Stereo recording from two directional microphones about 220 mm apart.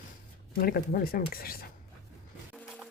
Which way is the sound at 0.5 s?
45° left (ahead or behind).